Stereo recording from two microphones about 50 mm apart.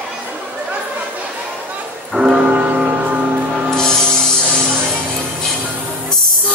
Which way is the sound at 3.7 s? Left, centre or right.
Centre.